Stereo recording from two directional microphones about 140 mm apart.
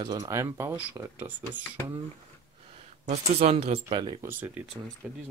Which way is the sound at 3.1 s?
50° right (ahead or behind).